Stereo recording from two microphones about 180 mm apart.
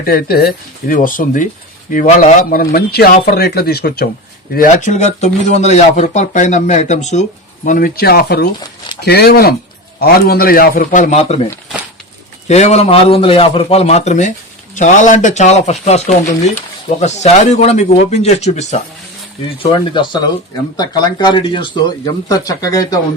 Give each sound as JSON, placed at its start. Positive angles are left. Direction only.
{"t": 0.0, "sound": "speech", "side_deg": 55}
{"t": 4.5, "sound": "speech", "side_deg": 45}
{"t": 12.5, "sound": "speech", "side_deg": 40}
{"t": 19.5, "sound": "speech", "side_deg": 25}